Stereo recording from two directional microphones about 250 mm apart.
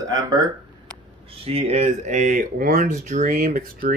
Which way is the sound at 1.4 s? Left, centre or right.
Right.